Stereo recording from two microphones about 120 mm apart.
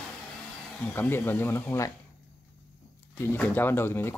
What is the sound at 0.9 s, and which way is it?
Speech, 15° left (ahead or behind).